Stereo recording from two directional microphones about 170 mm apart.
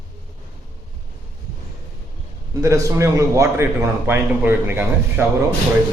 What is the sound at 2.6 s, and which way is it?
A man's voice, 20° right (ahead or behind).